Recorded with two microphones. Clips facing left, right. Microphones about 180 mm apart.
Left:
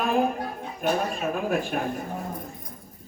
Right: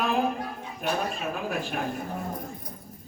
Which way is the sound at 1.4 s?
45° left (ahead or behind).